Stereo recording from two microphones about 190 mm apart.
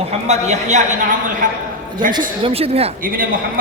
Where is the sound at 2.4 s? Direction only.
30° right (ahead or behind).